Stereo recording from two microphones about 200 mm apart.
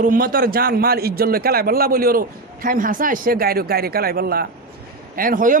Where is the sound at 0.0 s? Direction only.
45° right (ahead or behind).